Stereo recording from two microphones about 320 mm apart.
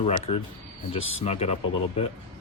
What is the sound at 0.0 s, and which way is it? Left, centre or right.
Speech, centre.